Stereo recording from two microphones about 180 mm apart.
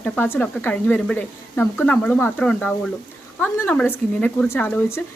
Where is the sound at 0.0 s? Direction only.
10° left (ahead or behind).